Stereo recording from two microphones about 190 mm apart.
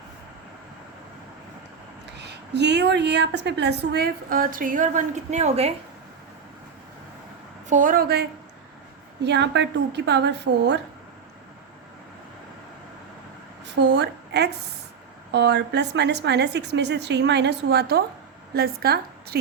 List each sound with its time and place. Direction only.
2.0 s a woman's voice: 65° right (ahead or behind); by 5.7 s 35° right (ahead or behind)
7.7 s a woman's voice: 45° right (ahead or behind); by 10.8 s 65° right (ahead or behind)
13.8 s a woman's voice: 65° right (ahead or behind)